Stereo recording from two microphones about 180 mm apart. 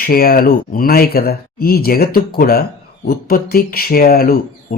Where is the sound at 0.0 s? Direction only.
55° left (ahead or behind).